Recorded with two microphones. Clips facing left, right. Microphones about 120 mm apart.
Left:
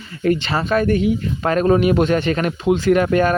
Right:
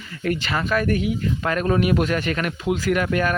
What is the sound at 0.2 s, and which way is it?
Speech, 25° left (ahead or behind).